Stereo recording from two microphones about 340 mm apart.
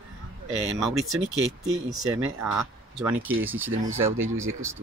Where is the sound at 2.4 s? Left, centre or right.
Centre.